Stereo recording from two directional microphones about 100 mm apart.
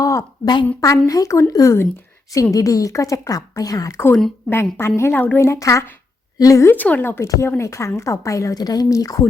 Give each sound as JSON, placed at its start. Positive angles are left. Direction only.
{"t": 0.0, "sound": "a sound", "side_deg": 30}
{"t": 0.8, "sound": "a woman's voice", "side_deg": 35}
{"t": 4.1, "sound": "a woman's voice", "side_deg": 10}
{"t": 4.5, "sound": "a woman's voice", "side_deg": 25}
{"t": 6.7, "sound": "a woman's voice", "side_deg": 15}